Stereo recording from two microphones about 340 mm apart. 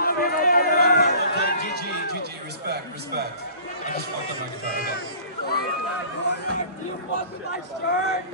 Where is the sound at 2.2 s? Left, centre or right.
Right.